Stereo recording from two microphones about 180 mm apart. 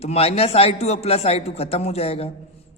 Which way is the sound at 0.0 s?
35° left (ahead or behind).